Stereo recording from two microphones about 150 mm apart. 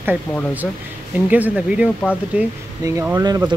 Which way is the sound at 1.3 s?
10° right (ahead or behind).